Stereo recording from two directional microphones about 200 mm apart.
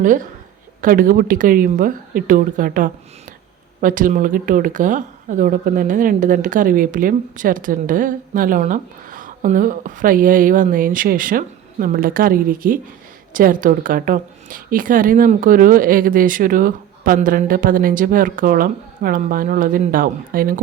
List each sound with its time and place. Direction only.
0.0 s speech: 40° right (ahead or behind)